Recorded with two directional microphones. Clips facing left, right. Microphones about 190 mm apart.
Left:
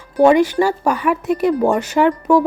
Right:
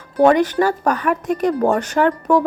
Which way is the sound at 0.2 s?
10° left (ahead or behind).